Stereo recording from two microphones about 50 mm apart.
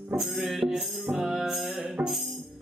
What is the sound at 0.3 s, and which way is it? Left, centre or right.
Music, centre.